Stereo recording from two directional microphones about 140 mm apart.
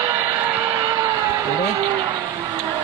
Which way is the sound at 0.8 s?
25° right (ahead or behind).